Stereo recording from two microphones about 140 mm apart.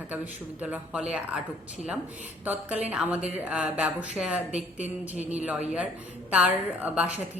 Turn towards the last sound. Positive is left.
turn(degrees=-10)  # may be behind; listen again after turning